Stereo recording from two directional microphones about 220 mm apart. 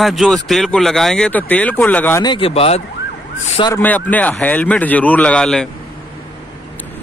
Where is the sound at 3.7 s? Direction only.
10° left (ahead or behind).